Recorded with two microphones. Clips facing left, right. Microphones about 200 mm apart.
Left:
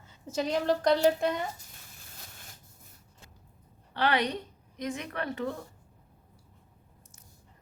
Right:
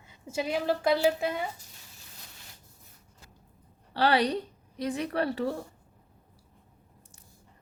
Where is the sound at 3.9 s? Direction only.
35° right (ahead or behind).